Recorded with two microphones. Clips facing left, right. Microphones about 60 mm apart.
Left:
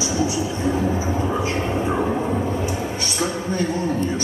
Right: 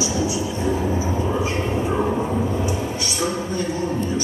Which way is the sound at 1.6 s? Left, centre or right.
Left.